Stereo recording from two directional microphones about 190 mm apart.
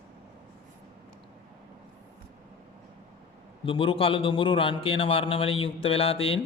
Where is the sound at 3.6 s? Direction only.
30° left (ahead or behind).